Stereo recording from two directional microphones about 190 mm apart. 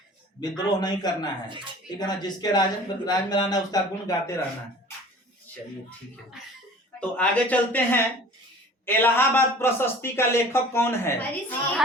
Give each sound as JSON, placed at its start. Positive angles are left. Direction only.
{"t": 0.5, "sound": "speech", "side_deg": 20}
{"t": 1.5, "sound": "speech", "side_deg": -25}
{"t": 2.0, "sound": "speech", "side_deg": 20}
{"t": 7.0, "sound": "a man's voice", "side_deg": 10}